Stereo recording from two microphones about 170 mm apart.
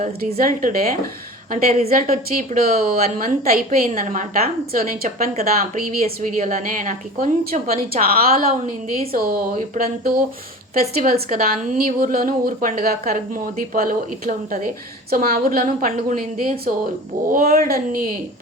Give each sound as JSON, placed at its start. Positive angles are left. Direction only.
{"t": 0.3, "sound": "a woman's voice", "side_deg": -55}
{"t": 5.3, "sound": "speech", "side_deg": -40}
{"t": 5.8, "sound": "a woman's voice", "side_deg": -60}
{"t": 7.9, "sound": "a woman's voice", "side_deg": -60}